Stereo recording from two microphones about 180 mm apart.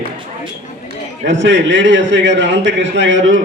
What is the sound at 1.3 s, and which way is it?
A man's voice, 90° right.